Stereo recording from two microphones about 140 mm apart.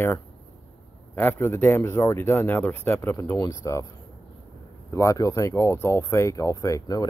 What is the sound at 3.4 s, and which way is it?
Speech, 25° left (ahead or behind).